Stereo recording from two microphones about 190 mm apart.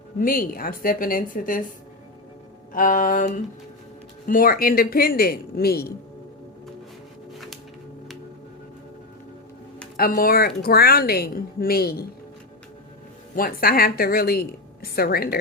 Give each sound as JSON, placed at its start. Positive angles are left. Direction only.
{"t": 0.2, "sound": "a woman's voice", "side_deg": 50}
{"t": 2.7, "sound": "a woman's voice", "side_deg": 45}
{"t": 7.3, "sound": "music", "side_deg": 0}
{"t": 10.0, "sound": "a woman's voice", "side_deg": 50}
{"t": 13.3, "sound": "a woman's voice", "side_deg": 50}